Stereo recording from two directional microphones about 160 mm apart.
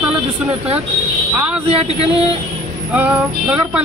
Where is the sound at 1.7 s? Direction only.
40° right (ahead or behind).